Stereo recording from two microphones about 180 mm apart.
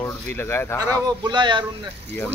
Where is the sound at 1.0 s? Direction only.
25° right (ahead or behind).